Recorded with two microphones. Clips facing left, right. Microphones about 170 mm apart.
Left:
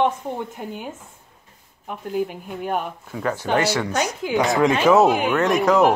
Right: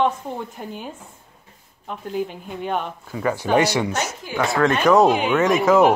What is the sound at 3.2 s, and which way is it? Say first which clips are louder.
Speech: right 2 dB; 15° right (ahead or behind).